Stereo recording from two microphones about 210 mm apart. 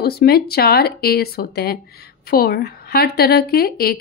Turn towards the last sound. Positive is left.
turn(degrees=45)  # may be behind; listen again after turning